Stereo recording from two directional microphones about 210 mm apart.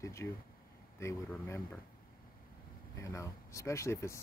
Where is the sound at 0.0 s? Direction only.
15° left (ahead or behind).